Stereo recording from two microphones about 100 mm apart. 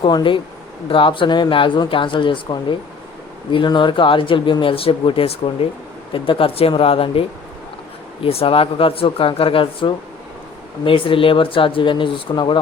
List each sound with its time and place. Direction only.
0.0 s speech: 55° left (ahead or behind)